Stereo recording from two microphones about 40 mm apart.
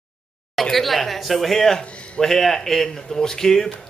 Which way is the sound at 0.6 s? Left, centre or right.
Centre.